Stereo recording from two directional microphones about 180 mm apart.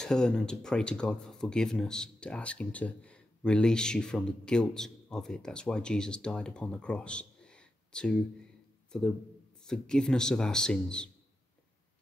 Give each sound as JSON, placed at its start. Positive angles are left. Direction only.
{"t": 0.0, "sound": "speech", "side_deg": 5}
{"t": 9.7, "sound": "speech", "side_deg": 5}